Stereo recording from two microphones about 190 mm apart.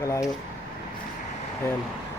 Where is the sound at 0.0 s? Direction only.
15° left (ahead or behind).